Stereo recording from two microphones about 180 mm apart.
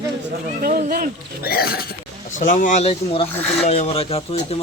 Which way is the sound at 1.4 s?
60° left (ahead or behind).